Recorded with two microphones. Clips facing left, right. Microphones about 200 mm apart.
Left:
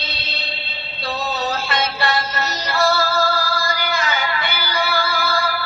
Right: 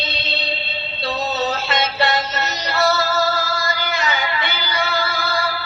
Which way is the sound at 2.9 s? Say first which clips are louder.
Even; 20° right (ahead or behind).